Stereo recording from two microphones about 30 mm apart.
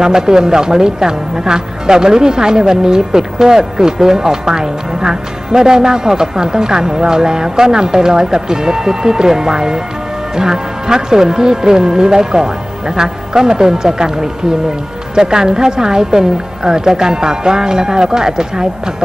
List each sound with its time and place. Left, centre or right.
0.0 s a woman's voice: right